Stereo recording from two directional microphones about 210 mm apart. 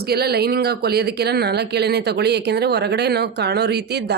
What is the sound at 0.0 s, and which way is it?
Speech, 50° right (ahead or behind).